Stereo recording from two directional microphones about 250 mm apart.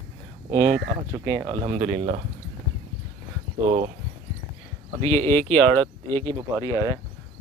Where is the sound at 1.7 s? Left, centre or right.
Right.